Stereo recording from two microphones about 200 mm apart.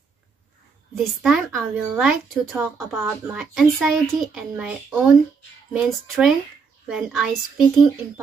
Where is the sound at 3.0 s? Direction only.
10° right (ahead or behind).